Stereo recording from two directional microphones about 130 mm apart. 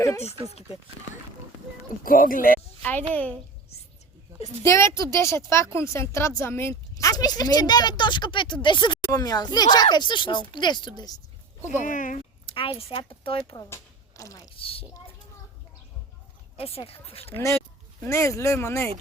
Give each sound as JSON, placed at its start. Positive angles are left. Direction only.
{"t": 2.0, "sound": "speech", "side_deg": 90}
{"t": 3.1, "sound": "a woman's voice", "side_deg": 10}
{"t": 4.6, "sound": "a woman's voice", "side_deg": 20}
{"t": 11.8, "sound": "speech", "side_deg": 80}
{"t": 12.5, "sound": "a woman's voice", "side_deg": 45}
{"t": 14.2, "sound": "speech", "side_deg": 25}
{"t": 14.5, "sound": "a woman's voice", "side_deg": 45}
{"t": 16.6, "sound": "a woman's voice", "side_deg": 50}
{"t": 18.0, "sound": "a woman's voice", "side_deg": 20}